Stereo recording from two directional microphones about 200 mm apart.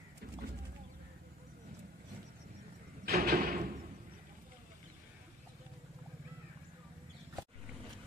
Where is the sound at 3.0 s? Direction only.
50° right (ahead or behind).